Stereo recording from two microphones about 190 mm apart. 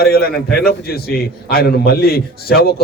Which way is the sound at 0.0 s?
55° left (ahead or behind).